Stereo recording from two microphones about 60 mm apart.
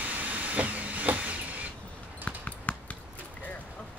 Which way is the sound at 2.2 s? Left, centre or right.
Left.